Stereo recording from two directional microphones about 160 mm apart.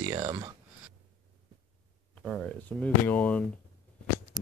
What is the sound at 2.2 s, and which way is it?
Speech, centre (ahead or behind).